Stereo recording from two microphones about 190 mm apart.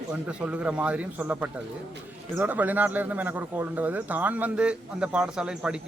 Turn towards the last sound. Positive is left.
turn(degrees=-5)  # may be behind; listen again after turning